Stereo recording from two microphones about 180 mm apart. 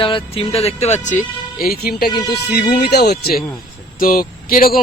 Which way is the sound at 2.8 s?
65° left (ahead or behind).